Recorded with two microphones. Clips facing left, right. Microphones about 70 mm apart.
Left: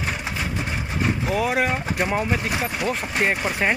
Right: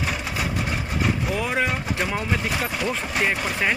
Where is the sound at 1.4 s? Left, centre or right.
Centre.